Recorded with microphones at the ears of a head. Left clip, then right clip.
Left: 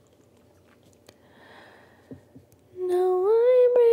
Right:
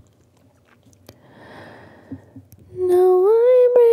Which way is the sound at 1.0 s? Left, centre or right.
Right.